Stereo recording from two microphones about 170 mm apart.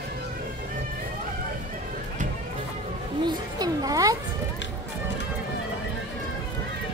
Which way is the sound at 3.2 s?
25° right (ahead or behind).